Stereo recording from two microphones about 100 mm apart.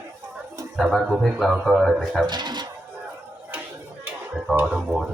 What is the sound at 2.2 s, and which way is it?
Speech, 50° right (ahead or behind).